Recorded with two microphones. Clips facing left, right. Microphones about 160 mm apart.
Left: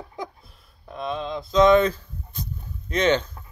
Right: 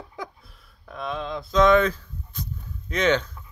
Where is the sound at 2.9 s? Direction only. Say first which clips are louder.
Left 1 dB; 30° left (ahead or behind).